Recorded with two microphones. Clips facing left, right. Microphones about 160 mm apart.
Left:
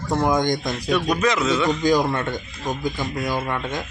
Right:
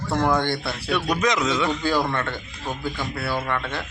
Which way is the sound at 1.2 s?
15° right (ahead or behind).